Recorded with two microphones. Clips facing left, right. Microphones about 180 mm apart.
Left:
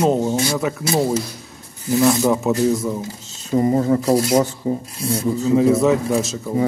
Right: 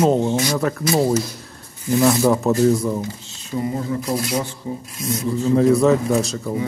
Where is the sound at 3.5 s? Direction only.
45° left (ahead or behind).